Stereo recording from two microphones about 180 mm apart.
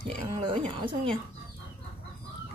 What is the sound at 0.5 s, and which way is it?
Speech, 30° right (ahead or behind).